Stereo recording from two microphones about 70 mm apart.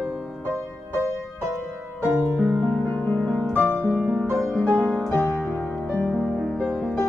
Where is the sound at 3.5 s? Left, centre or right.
Right.